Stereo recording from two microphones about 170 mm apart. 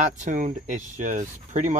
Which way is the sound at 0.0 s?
45° right (ahead or behind).